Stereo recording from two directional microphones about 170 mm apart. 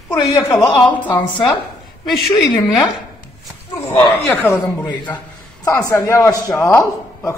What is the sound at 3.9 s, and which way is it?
A man's voice, 25° left (ahead or behind).